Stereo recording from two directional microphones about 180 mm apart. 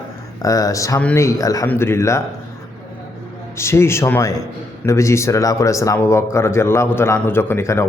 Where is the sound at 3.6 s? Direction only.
15° left (ahead or behind).